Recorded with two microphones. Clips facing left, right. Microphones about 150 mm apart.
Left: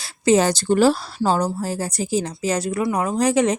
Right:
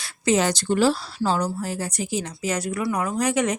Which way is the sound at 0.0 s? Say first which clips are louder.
Left 4 dB; 30° left (ahead or behind).